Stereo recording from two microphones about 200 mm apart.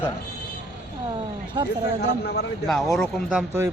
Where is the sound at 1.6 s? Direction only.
20° right (ahead or behind).